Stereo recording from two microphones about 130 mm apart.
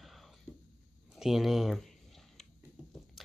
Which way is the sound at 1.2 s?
Centre (ahead or behind).